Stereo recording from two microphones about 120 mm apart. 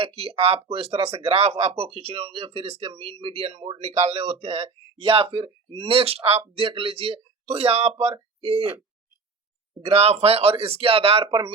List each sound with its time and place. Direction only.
0.0 s speech: 55° right (ahead or behind)
6.6 s speech: 45° right (ahead or behind)
9.8 s speech: 55° right (ahead or behind)